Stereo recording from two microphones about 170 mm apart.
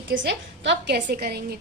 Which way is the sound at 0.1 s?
90° right.